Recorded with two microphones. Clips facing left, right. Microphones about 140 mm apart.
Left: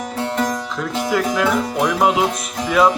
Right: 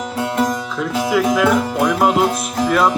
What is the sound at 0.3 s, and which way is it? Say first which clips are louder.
Music: right 3 dB; 5° right (ahead or behind).